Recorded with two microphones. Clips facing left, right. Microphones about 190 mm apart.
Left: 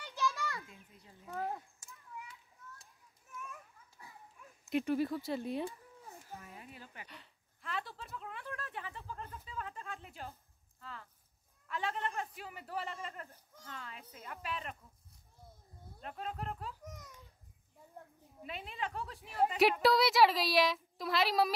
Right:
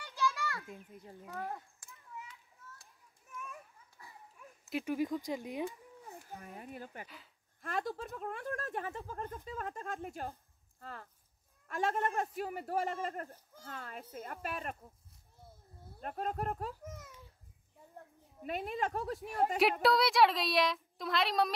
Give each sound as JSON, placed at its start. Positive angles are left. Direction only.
{"t": 0.0, "sound": "children playing", "side_deg": 20}
{"t": 0.7, "sound": "speech", "side_deg": -50}
{"t": 1.3, "sound": "speech", "side_deg": 15}
{"t": 4.6, "sound": "speech", "side_deg": -5}
{"t": 4.9, "sound": "speech", "side_deg": -15}
{"t": 6.3, "sound": "speech", "side_deg": -50}
{"t": 16.0, "sound": "speech", "side_deg": -45}
{"t": 16.8, "sound": "a sound", "side_deg": -5}
{"t": 18.4, "sound": "speech", "side_deg": -45}
{"t": 19.8, "sound": "speech", "side_deg": 0}